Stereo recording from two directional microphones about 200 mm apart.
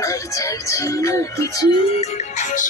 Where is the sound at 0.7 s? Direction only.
15° left (ahead or behind).